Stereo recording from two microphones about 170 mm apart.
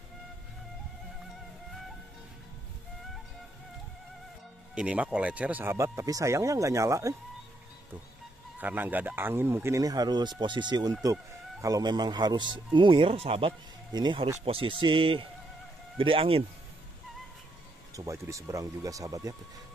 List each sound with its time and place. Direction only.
4.7 s speech: 5° right (ahead or behind)
8.5 s a man's voice: 10° right (ahead or behind); by 16.4 s 30° right (ahead or behind)
17.9 s speech: 20° right (ahead or behind)